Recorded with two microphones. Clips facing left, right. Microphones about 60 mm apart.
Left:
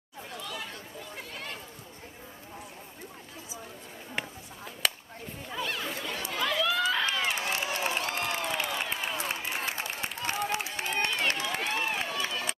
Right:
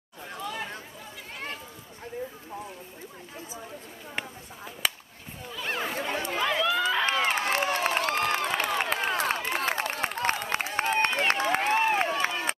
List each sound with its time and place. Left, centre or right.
0.3 s chatter: right
4.1 s chop: centre
5.6 s chatter: right
6.3 s run: right
7.1 s crowd: right
10.5 s a sound: right